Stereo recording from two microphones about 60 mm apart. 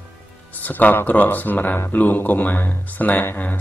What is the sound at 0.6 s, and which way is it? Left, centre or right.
Speech, left.